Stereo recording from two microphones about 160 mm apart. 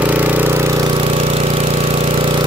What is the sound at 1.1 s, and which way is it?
Engine, 40° right (ahead or behind).